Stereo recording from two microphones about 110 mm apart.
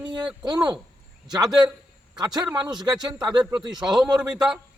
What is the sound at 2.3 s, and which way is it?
Speech, 40° right (ahead or behind).